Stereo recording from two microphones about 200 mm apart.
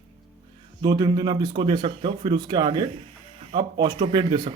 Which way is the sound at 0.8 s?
20° right (ahead or behind).